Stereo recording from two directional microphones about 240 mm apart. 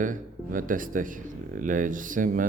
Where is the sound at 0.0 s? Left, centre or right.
Right.